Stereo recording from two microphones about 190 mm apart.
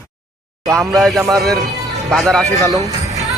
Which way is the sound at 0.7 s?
Centre (ahead or behind).